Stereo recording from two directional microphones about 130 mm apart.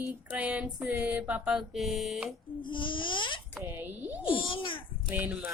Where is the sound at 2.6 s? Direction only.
40° left (ahead or behind).